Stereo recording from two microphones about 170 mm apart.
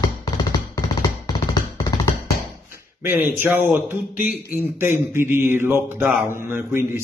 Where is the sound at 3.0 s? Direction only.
10° right (ahead or behind).